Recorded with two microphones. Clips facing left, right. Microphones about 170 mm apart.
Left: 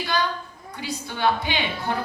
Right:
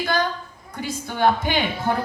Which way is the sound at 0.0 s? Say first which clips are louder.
Right 2 dB; 50° right (ahead or behind).